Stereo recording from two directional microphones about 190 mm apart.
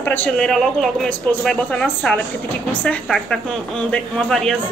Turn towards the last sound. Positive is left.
turn(degrees=0)  # may be behind; listen again after turning